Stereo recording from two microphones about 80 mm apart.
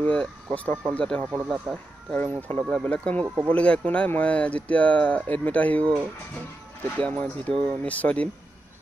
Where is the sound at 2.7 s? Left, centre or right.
Centre.